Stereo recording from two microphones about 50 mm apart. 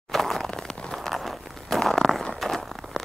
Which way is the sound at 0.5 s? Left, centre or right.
Centre.